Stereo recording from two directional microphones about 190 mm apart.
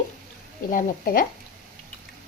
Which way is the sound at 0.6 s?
45° left (ahead or behind).